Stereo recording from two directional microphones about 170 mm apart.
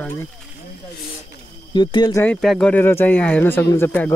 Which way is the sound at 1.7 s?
30° left (ahead or behind).